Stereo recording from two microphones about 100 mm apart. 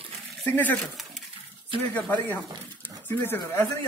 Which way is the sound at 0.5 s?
15° left (ahead or behind).